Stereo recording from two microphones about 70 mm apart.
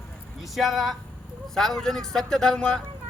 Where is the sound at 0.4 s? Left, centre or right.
Centre.